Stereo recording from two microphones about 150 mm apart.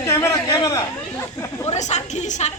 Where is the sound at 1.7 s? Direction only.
50° left (ahead or behind).